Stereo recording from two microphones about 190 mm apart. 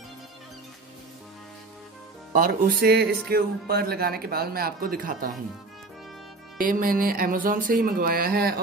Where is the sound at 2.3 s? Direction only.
45° right (ahead or behind).